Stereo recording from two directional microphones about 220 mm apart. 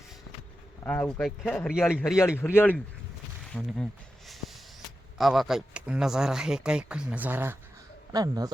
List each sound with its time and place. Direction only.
0.9 s speech: 5° left (ahead or behind)
5.1 s speech: centre (ahead or behind); by 8.4 s 15° right (ahead or behind)